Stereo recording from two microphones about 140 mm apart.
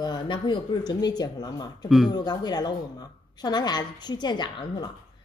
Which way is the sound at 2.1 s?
30° left (ahead or behind).